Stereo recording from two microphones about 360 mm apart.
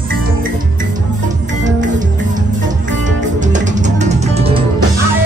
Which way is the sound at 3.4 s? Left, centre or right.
Centre.